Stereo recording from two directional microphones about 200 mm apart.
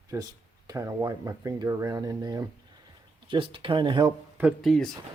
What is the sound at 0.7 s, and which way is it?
Speech, 15° right (ahead or behind).